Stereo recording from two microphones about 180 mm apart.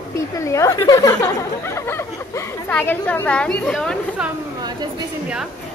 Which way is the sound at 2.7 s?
10° left (ahead or behind).